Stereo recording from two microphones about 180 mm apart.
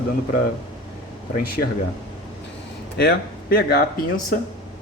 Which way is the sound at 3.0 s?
60° left (ahead or behind).